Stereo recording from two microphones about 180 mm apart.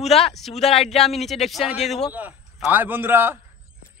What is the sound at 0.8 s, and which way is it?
Speech, centre (ahead or behind).